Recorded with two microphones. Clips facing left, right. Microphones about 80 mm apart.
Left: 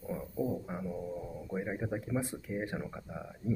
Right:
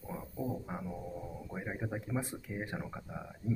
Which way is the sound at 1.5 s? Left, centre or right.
Centre.